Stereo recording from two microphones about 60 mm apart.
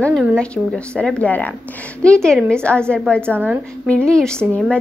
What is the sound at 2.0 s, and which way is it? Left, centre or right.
Speech, centre.